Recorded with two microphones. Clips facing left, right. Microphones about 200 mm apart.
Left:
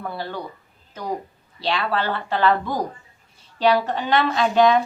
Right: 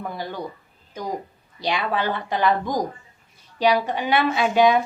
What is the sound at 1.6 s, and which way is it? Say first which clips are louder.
Speech: even; 15° right (ahead or behind).